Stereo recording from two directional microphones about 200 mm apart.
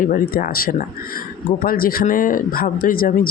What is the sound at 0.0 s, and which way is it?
Speech, 45° left (ahead or behind).